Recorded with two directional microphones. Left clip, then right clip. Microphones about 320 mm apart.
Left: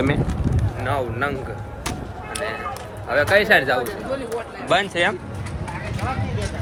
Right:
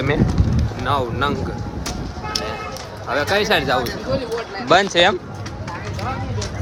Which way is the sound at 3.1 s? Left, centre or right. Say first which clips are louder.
Left 2 dB; centre.